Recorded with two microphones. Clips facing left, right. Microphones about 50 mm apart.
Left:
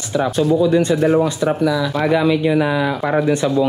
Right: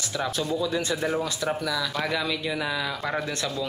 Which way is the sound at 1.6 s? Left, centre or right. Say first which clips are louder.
Left 10 dB; centre.